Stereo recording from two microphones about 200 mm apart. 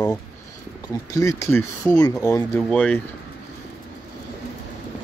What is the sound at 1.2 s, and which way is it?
Speech, 15° left (ahead or behind).